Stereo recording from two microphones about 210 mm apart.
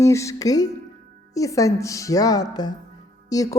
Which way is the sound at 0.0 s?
15° left (ahead or behind).